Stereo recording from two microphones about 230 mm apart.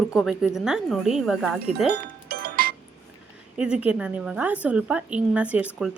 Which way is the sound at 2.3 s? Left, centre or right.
Right.